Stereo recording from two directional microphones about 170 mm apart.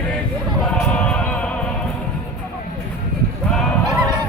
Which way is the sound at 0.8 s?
5° left (ahead or behind).